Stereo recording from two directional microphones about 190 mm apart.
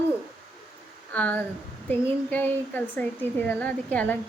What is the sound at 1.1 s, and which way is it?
A woman's voice, 10° left (ahead or behind).